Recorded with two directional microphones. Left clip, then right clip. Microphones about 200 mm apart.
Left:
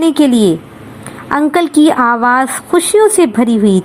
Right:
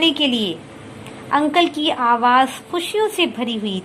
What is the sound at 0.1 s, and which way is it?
A woman's voice, 30° left (ahead or behind).